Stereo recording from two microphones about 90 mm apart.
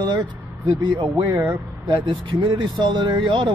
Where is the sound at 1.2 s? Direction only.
25° right (ahead or behind).